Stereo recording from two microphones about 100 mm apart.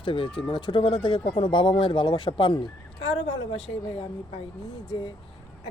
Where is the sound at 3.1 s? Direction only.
65° left (ahead or behind).